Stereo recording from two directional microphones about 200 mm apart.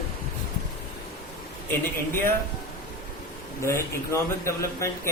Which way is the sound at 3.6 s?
15° left (ahead or behind).